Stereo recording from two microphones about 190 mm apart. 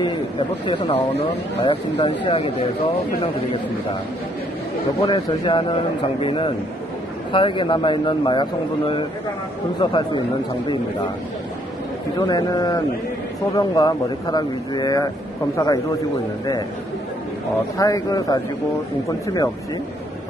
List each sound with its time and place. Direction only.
1.6 s a man's voice: 30° left (ahead or behind)
5.0 s a man's voice: 25° left (ahead or behind)
12.2 s a man's voice: 20° left (ahead or behind)
17.7 s a man's voice: 20° left (ahead or behind)